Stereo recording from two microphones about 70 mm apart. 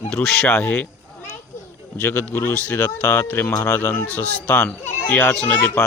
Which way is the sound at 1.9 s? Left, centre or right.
Left.